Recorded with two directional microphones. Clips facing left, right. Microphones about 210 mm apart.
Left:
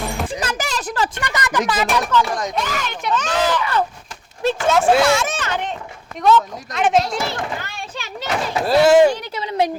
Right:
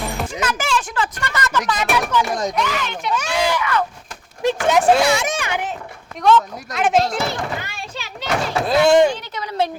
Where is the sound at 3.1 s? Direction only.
10° right (ahead or behind).